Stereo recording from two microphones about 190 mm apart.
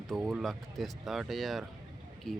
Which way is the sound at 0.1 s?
5° right (ahead or behind).